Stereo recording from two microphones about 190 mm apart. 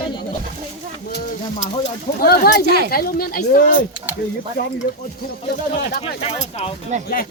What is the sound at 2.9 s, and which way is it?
Speech, 50° left (ahead or behind).